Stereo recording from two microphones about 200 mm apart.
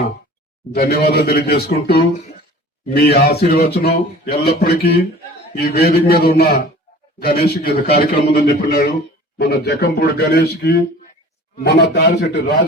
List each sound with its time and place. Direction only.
0.7 s a man's voice: 50° left (ahead or behind)